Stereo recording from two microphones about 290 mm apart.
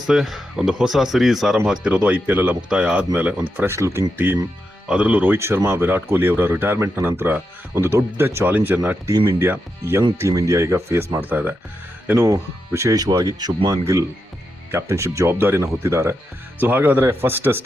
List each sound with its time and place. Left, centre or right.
0.1 s speech: centre